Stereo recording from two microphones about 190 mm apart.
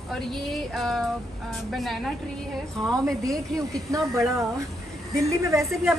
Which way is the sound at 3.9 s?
15° right (ahead or behind).